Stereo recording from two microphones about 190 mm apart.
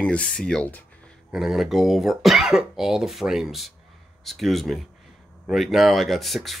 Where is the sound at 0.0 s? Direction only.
5° left (ahead or behind).